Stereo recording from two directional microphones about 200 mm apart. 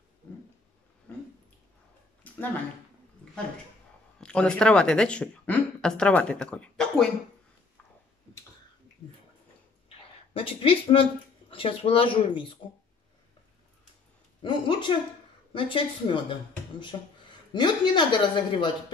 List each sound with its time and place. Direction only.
4.2 s speech: 5° left (ahead or behind)
9.8 s a sound: 30° left (ahead or behind)
11.5 s speech: 25° left (ahead or behind)
14.4 s speech: 25° left (ahead or behind)
17.5 s speech: 20° left (ahead or behind)